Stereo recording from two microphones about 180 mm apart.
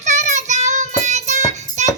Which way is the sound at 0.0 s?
40° right (ahead or behind).